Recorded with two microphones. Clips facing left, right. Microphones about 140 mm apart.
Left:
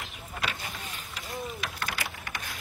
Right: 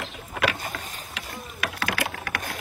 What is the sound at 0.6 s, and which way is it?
Vehicle, 45° right (ahead or behind).